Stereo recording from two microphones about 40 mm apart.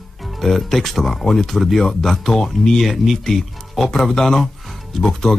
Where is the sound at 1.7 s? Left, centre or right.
Centre.